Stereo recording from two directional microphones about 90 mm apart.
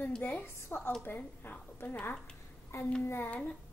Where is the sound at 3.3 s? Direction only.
15° left (ahead or behind).